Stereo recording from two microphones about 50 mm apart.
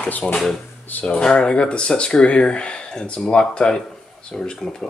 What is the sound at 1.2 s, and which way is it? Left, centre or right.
Speech, centre.